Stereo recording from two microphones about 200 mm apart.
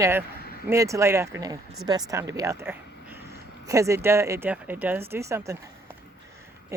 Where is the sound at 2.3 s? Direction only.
15° right (ahead or behind).